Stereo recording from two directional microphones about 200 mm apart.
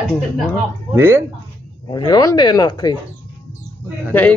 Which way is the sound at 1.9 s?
20° left (ahead or behind).